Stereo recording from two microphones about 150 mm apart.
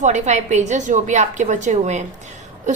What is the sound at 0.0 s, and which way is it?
A woman's voice, 50° right (ahead or behind).